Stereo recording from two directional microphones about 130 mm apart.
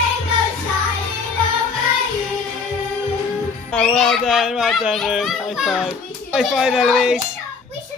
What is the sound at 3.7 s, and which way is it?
A child's voice, 5° left (ahead or behind).